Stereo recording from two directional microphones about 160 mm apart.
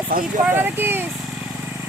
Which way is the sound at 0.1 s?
65° right (ahead or behind).